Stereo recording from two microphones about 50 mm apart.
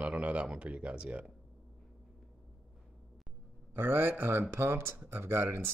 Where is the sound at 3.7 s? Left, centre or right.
Right.